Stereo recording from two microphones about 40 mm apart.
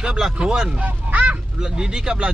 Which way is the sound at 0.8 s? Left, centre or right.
Right.